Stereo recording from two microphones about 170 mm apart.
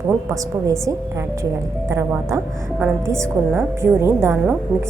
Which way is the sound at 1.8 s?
15° right (ahead or behind).